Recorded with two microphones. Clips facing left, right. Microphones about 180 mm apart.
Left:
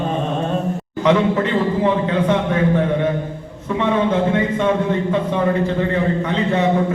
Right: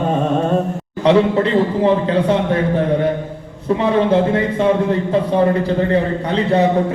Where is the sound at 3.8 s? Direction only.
35° right (ahead or behind).